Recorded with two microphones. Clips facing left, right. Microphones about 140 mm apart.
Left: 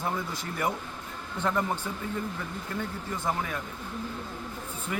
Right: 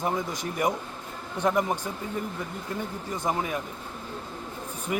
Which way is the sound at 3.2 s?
20° right (ahead or behind).